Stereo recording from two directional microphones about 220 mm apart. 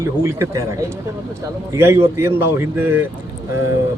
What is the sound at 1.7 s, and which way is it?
A man's voice, 10° right (ahead or behind).